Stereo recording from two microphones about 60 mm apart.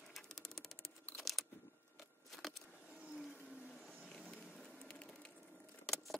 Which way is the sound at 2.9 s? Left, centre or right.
Right.